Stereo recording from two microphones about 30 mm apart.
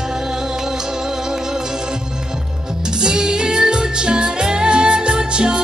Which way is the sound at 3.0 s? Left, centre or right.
Right.